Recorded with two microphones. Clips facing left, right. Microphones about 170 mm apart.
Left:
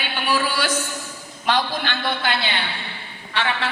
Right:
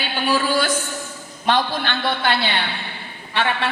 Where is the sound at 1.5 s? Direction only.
50° right (ahead or behind).